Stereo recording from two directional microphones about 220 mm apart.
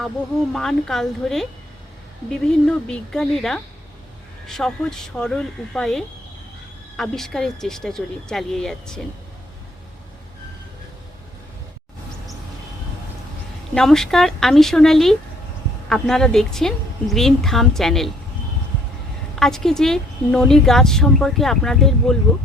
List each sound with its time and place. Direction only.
0.5 s a woman's voice: centre (ahead or behind)
13.7 s a woman's voice: centre (ahead or behind)
19.4 s a woman's voice: centre (ahead or behind)